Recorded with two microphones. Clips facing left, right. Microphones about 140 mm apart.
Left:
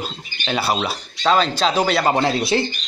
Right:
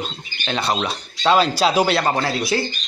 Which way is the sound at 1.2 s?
5° right (ahead or behind).